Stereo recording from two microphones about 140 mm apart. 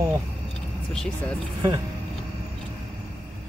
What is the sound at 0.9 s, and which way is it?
Speech, 5° left (ahead or behind).